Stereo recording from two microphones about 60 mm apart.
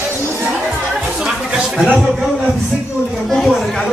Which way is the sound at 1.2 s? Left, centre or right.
Centre.